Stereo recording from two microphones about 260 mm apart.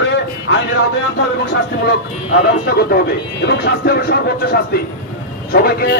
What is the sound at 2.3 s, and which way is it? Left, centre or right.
Speech, left.